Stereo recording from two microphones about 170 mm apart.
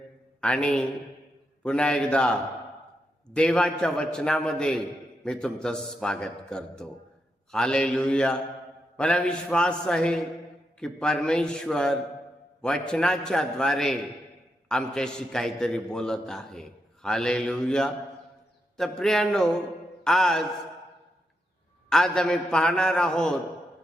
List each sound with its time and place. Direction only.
0.4 s a man's voice: 5° left (ahead or behind)
21.8 s a man's voice: 5° left (ahead or behind)